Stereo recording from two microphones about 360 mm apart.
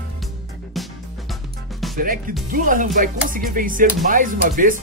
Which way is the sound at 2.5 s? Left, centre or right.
Right.